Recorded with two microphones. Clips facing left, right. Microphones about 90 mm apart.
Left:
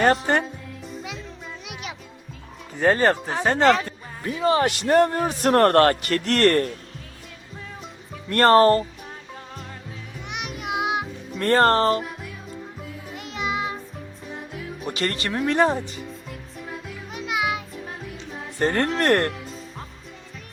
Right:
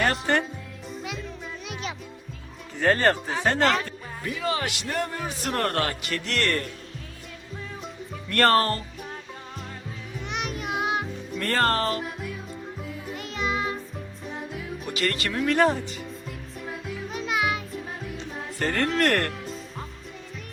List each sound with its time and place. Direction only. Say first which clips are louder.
0.0 s speech: left 4 dB; 25° left (ahead or behind)
1.6 s music: right 2 dB; 10° left (ahead or behind)
2.8 s speech: left 3 dB; 10° left (ahead or behind)
3.8 s speech: left 2 dB; 25° left (ahead or behind)
4.9 s a man's voice: left 13 dB; 50° left (ahead or behind)
8.3 s speech: left 6 dB; 25° left (ahead or behind)
10.2 s music: even; 10° left (ahead or behind)
11.3 s speech: left 6 dB; 35° left (ahead or behind)
13.1 s music: left 1 dB; 15° left (ahead or behind)
14.8 s speech: left 2 dB; 30° left (ahead or behind)
16.6 s music: right 2 dB; centre (ahead or behind)
17.1 s music: left 1 dB; 15° left (ahead or behind)
18.6 s speech: left 2 dB; 30° left (ahead or behind)